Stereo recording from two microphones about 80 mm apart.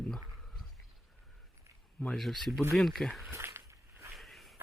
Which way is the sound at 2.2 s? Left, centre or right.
Centre.